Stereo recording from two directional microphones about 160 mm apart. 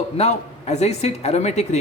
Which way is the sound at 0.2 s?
45° left (ahead or behind).